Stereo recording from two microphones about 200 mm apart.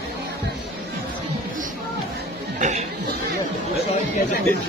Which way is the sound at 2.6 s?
35° right (ahead or behind).